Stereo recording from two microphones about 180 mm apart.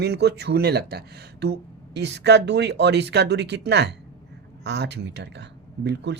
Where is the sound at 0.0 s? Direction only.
65° right (ahead or behind).